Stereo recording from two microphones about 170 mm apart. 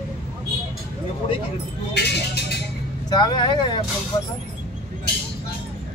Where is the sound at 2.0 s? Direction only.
75° left (ahead or behind).